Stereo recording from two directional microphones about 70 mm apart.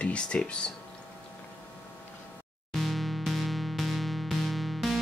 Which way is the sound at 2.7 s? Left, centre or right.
Centre.